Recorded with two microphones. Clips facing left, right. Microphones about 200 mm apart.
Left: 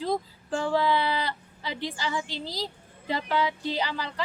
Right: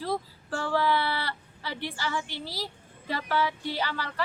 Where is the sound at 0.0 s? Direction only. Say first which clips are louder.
Left 3 dB; 15° left (ahead or behind).